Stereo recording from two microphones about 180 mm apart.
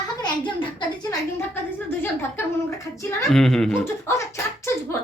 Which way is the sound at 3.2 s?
Centre (ahead or behind).